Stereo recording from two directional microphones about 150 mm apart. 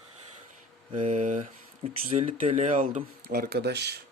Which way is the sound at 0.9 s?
40° right (ahead or behind).